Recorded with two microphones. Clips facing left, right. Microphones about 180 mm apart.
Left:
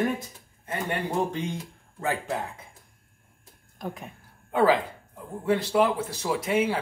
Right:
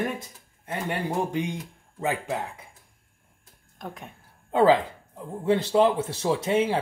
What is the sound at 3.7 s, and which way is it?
Speech, centre (ahead or behind).